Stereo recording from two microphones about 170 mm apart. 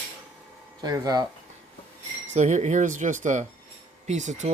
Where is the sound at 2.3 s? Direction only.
45° right (ahead or behind).